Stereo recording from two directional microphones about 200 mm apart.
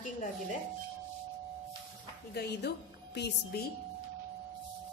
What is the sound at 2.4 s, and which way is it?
Speech, 55° left (ahead or behind).